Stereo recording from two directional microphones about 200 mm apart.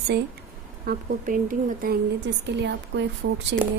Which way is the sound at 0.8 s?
45° right (ahead or behind).